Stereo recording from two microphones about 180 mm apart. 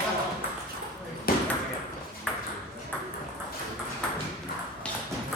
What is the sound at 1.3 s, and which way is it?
Ping, 55° left (ahead or behind).